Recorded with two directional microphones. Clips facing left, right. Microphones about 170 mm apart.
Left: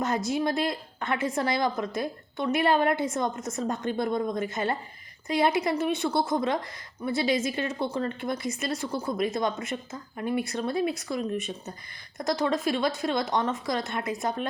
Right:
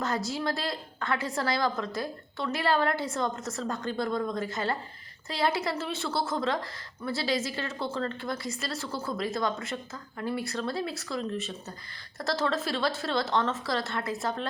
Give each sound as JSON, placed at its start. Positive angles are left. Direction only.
{"t": 0.0, "sound": "a woman's voice", "side_deg": 20}